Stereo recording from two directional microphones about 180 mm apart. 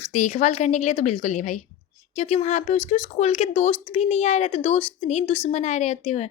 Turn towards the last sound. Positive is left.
turn(degrees=40)  # may be behind; listen again after turning